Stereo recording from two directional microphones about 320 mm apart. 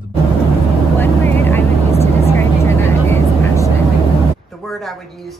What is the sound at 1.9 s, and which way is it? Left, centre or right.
Vehicle, centre.